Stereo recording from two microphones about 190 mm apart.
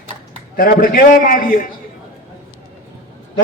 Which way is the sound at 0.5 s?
50° left (ahead or behind).